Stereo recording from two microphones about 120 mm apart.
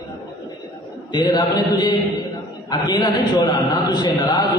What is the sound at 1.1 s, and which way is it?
A man's voice, 35° left (ahead or behind).